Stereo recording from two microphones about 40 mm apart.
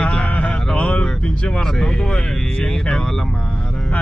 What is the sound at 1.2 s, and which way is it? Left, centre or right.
Speech, left.